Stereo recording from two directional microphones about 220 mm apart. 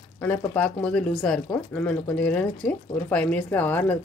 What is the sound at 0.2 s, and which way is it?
Speech, 5° left (ahead or behind).